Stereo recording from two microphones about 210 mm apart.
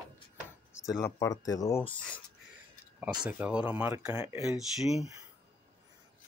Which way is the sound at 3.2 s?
5° right (ahead or behind).